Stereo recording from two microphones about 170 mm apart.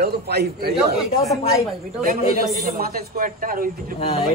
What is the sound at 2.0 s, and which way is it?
Speech, 60° right (ahead or behind).